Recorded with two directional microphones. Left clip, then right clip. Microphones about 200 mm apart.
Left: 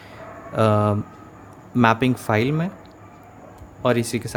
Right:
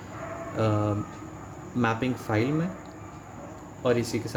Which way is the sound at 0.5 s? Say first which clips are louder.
Left 9 dB; 40° left (ahead or behind).